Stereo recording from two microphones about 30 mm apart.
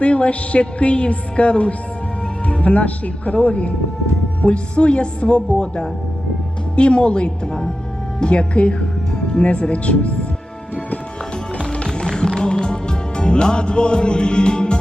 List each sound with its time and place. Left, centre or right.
0.0 s a woman's voice: left
9.1 s music: left
9.4 s speech: left
11.9 s music: left